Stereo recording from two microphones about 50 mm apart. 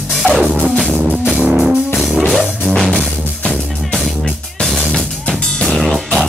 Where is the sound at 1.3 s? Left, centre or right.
Centre.